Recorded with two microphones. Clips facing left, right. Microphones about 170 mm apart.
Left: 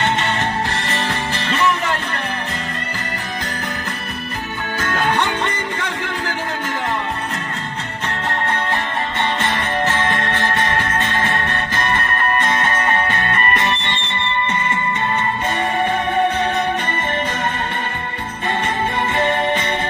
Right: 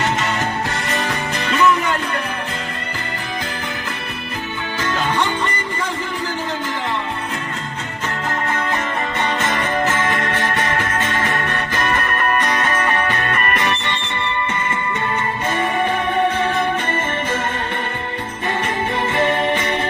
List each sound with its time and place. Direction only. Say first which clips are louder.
4.8 s music: left 1 dB; 55° left (ahead or behind)
9.9 s music: even; 30° left (ahead or behind)
19.1 s music: right 1 dB; 25° left (ahead or behind)